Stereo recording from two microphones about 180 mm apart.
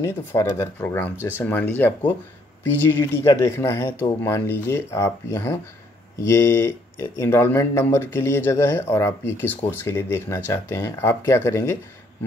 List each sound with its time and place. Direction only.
0.0 s speech: 15° left (ahead or behind)